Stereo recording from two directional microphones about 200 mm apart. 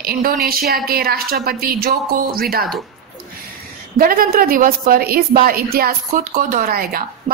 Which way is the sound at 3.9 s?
45° right (ahead or behind).